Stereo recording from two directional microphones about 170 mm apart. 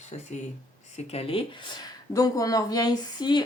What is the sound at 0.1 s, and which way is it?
Speech, 35° left (ahead or behind).